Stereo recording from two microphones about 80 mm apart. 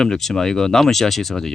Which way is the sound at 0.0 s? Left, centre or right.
Centre.